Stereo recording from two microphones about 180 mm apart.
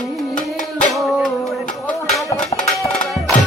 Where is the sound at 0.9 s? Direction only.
Centre (ahead or behind).